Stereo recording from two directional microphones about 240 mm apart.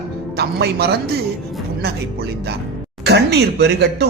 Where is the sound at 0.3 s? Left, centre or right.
Right.